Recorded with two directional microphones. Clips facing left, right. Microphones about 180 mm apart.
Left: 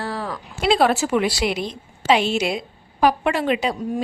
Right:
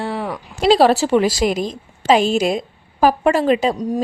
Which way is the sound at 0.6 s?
35° right (ahead or behind).